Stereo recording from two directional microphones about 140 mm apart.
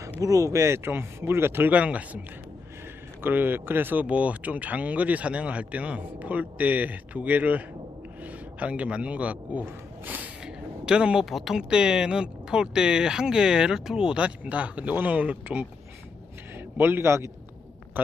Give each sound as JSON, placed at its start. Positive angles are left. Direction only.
{"t": 0.2, "sound": "a man's voice", "side_deg": -25}
{"t": 3.2, "sound": "a man's voice", "side_deg": -15}